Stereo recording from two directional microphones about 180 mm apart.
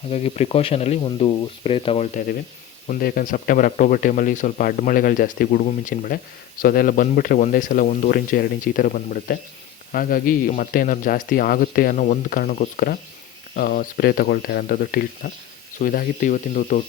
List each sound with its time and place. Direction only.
0.1 s speech: 35° left (ahead or behind)
2.8 s speech: 50° left (ahead or behind)